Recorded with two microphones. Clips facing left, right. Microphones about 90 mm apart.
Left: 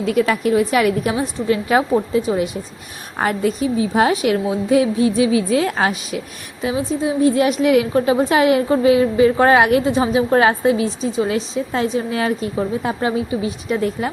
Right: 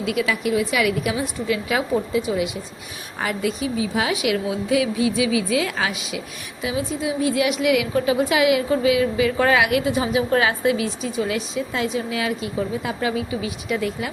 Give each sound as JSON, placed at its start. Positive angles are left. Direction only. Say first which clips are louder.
{"t": 0.0, "sound": "a woman's voice", "louder": "left 5 dB", "side_deg": 40}